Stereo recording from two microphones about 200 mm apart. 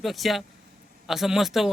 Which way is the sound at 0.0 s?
Centre (ahead or behind).